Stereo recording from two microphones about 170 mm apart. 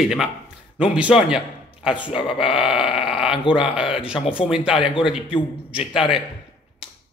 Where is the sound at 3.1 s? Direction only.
5° right (ahead or behind).